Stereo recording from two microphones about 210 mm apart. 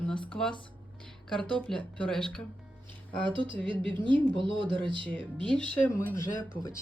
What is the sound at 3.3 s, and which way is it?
Speech, 25° right (ahead or behind).